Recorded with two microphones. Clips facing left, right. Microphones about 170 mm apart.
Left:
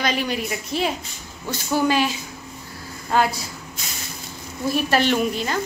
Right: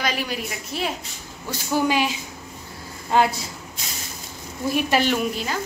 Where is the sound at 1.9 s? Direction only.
15° right (ahead or behind).